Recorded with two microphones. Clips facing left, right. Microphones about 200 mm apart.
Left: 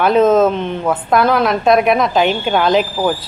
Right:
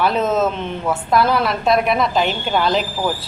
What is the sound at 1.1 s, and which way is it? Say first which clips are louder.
A woman's voice: left 3 dB; 50° left (ahead or behind).